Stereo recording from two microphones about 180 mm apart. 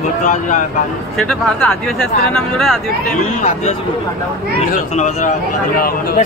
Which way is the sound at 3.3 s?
40° left (ahead or behind).